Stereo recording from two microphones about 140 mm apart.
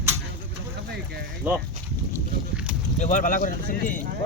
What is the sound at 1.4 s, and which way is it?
Speech, 10° right (ahead or behind).